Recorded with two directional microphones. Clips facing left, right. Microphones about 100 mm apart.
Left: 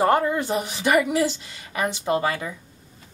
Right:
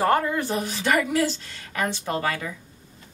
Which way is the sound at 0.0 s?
20° left (ahead or behind).